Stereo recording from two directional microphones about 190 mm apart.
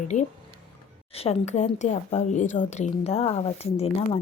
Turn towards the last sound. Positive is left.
turn(degrees=30)  # may be behind; listen again after turning